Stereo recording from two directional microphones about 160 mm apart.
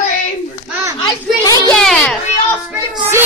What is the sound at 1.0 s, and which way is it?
Speech, 25° left (ahead or behind).